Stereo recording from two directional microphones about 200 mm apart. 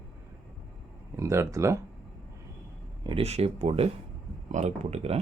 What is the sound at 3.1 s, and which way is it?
Speech, 30° right (ahead or behind).